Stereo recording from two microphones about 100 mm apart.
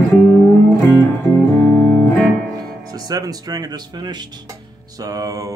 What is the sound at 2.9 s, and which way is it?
Speech, 40° right (ahead or behind).